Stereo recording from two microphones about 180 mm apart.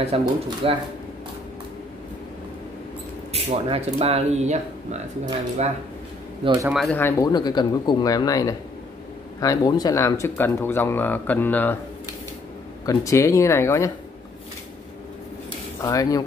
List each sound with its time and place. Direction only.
0.1 s speech: 35° right (ahead or behind)
3.3 s speech: 35° right (ahead or behind)
6.4 s a man's voice: 20° right (ahead or behind)
6.7 s speech: centre (ahead or behind)
7.0 s speech: 15° left (ahead or behind)
12.8 s speech: 15° left (ahead or behind)
15.8 s speech: 20° left (ahead or behind)